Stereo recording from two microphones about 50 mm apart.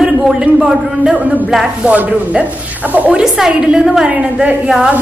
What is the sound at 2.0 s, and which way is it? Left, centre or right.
Speech, right.